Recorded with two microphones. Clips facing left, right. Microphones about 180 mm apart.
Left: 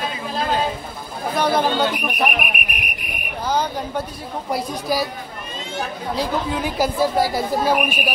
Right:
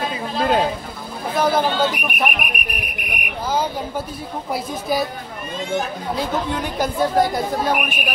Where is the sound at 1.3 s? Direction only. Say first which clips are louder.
Right 1 dB; centre (ahead or behind).